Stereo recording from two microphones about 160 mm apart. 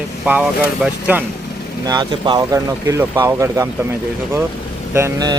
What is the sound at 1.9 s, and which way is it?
Speech, 25° right (ahead or behind).